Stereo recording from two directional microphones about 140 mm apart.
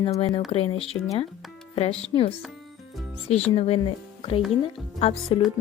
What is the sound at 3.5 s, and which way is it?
Speech, 45° left (ahead or behind).